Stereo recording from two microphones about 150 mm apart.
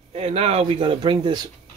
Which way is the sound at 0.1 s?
45° right (ahead or behind).